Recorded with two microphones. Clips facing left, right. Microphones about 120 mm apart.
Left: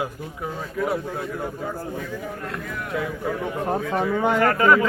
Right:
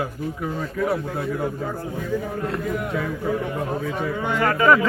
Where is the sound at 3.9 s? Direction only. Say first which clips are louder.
Left 4 dB; 55° left (ahead or behind).